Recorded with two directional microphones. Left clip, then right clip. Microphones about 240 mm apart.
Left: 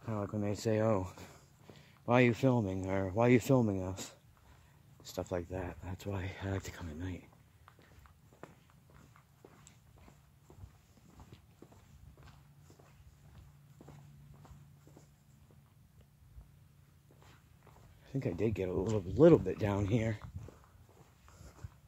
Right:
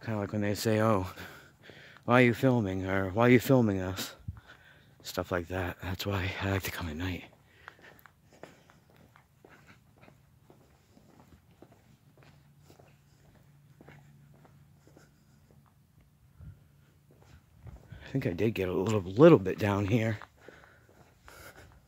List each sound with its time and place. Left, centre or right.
0.0 s speech: right
8.4 s walk: centre
13.8 s walk: centre
18.0 s speech: right
21.3 s a sound: right